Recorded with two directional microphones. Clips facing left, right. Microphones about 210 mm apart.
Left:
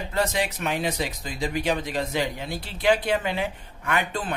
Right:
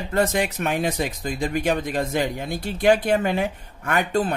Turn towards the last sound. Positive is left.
turn(degrees=-45)  # may be behind; listen again after turning